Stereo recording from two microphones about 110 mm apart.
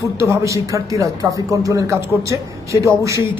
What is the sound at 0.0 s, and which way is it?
A man's voice, 25° right (ahead or behind).